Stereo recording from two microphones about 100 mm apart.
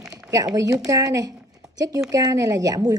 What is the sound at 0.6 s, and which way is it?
Speech, 35° right (ahead or behind).